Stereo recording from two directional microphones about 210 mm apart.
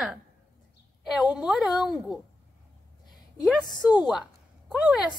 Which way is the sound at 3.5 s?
Centre (ahead or behind).